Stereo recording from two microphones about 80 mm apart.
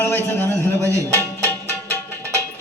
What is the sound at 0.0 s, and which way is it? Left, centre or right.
Music, left.